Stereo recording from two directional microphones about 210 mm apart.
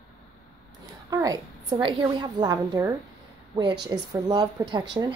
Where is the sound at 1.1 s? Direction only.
15° right (ahead or behind).